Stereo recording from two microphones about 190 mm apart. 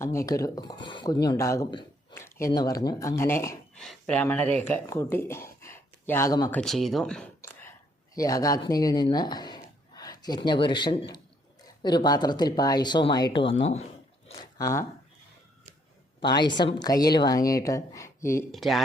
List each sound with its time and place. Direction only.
0.0 s a woman's voice: 15° left (ahead or behind)
2.1 s a sound: 15° left (ahead or behind)
2.6 s speech: 20° left (ahead or behind)
6.6 s speech: centre (ahead or behind)
8.1 s a woman's voice: 20° left (ahead or behind)
14.3 s speech: 20° left (ahead or behind)
16.2 s a woman's voice: 25° left (ahead or behind)
18.5 s speech: centre (ahead or behind)